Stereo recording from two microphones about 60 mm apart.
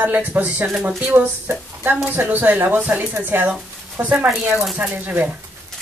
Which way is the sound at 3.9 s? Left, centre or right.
Right.